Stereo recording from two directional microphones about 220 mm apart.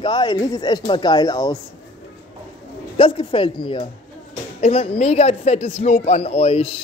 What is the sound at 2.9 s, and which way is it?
A man's voice, 25° left (ahead or behind).